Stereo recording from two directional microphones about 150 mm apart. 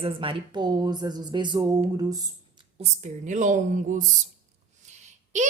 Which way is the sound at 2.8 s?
50° right (ahead or behind).